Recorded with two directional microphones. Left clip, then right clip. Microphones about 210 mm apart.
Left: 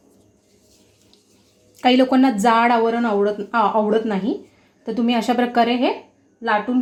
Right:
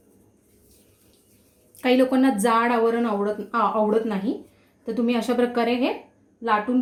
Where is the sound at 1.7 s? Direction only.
30° left (ahead or behind).